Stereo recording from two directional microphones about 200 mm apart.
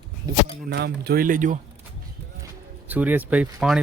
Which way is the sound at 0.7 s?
55° right (ahead or behind).